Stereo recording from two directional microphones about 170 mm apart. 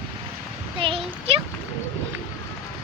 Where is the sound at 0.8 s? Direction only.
35° right (ahead or behind).